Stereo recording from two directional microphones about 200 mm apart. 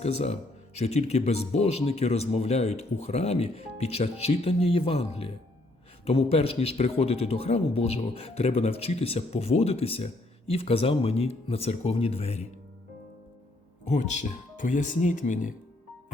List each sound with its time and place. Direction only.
0.0 s speech: 30° left (ahead or behind)
13.8 s speech: 35° left (ahead or behind)